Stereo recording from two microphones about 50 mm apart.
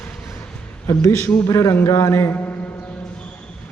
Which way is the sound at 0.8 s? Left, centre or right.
Left.